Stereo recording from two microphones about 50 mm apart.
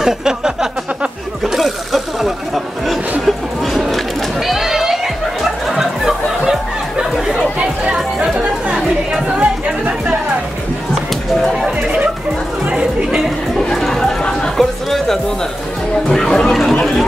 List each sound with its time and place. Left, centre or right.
0.0 s a sound: centre
1.4 s a sound: centre
5.4 s music: centre
9.4 s chatter: right
13.6 s chatter: centre
14.6 s music: centre
16.1 s chatter: centre